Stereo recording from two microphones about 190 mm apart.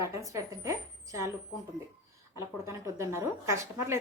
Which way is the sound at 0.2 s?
15° right (ahead or behind).